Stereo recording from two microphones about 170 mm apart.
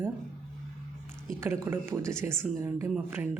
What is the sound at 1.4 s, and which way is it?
A woman's voice, 15° right (ahead or behind).